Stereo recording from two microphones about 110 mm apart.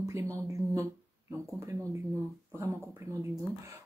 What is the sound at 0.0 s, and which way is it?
A woman's voice, 25° right (ahead or behind).